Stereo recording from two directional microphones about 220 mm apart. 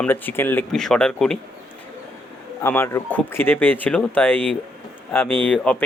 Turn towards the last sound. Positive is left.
turn(degrees=5)  # may be behind; listen again after turning